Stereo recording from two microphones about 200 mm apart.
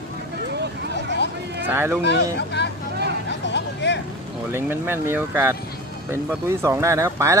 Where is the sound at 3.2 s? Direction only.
60° left (ahead or behind).